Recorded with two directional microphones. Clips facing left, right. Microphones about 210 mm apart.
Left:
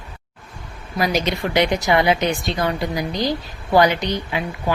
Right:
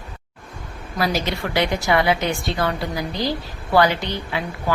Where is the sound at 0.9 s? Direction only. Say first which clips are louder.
Left 2 dB; 20° left (ahead or behind).